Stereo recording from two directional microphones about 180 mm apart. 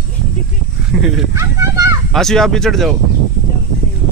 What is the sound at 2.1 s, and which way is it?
Speech, centre (ahead or behind).